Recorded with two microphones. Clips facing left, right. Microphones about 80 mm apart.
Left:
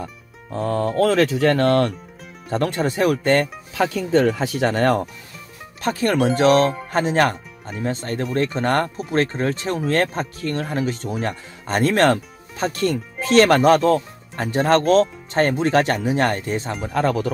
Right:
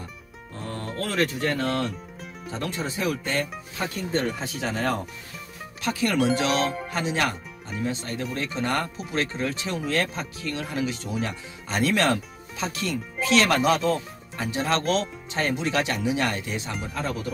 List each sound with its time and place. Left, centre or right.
0.0 s music: left
1.1 s speech: left
5.8 s speech: left
16.9 s speech: left